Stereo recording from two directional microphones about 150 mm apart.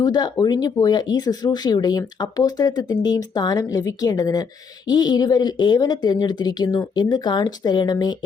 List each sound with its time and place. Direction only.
0.0 s speech: 25° left (ahead or behind)